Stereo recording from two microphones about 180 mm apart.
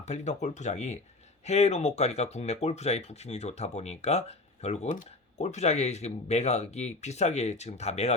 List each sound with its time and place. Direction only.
0.0 s speech: 40° left (ahead or behind)